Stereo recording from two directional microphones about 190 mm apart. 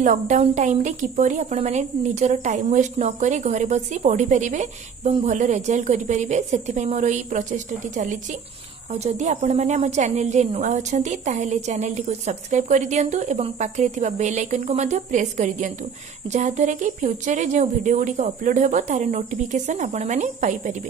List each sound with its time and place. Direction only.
0.0 s a woman's voice: 40° right (ahead or behind)